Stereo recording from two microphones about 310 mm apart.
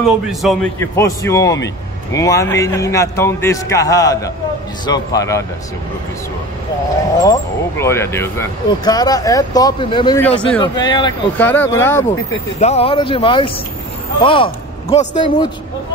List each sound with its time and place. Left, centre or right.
0.0 s speech: centre
7.2 s speech: centre
12.5 s a man's voice: centre